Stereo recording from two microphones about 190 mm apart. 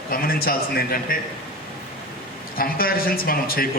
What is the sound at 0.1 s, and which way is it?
A man's voice, 50° left (ahead or behind).